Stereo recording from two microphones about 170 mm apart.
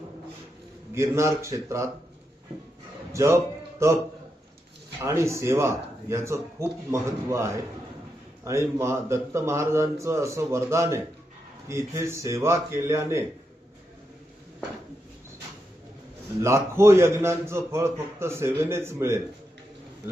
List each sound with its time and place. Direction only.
0.9 s a man's voice: 15° right (ahead or behind)
3.1 s music: 15° right (ahead or behind)
4.9 s a man's voice: 15° right (ahead or behind)
16.4 s a man's voice: 15° right (ahead or behind)